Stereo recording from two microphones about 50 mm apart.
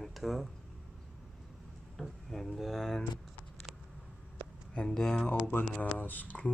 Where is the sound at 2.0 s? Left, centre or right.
Centre.